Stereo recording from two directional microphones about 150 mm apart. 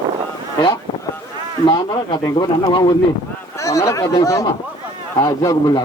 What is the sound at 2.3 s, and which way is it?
A man's voice, 30° left (ahead or behind).